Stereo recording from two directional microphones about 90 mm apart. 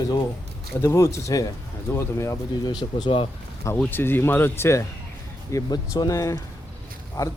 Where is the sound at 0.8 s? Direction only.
30° left (ahead or behind).